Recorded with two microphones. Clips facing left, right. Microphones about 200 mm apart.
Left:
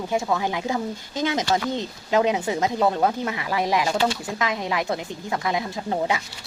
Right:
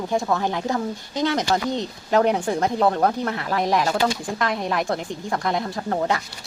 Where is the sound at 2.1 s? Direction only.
10° left (ahead or behind).